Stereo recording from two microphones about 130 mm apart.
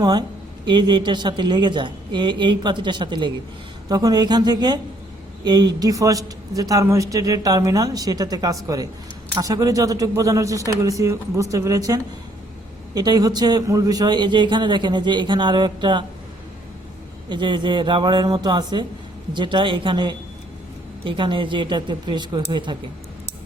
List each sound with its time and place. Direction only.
0.0 s a man's voice: 35° right (ahead or behind)
17.2 s a man's voice: 35° right (ahead or behind)